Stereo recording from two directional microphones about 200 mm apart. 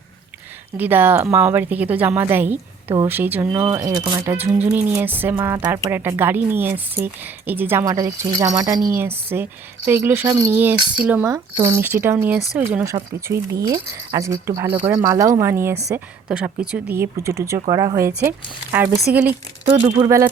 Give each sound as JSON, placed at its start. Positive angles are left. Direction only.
{"t": 0.8, "sound": "a woman's voice", "side_deg": -10}
{"t": 19.6, "sound": "speech", "side_deg": -30}